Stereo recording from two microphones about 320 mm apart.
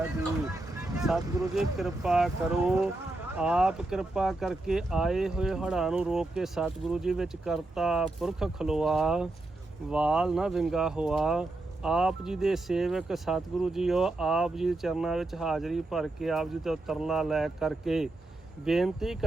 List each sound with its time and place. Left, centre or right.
0.9 s speech: centre